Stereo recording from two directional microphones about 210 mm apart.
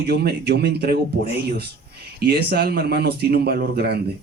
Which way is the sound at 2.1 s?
50° right (ahead or behind).